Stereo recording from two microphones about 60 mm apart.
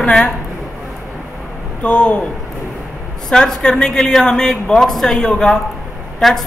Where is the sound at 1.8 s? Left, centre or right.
Centre.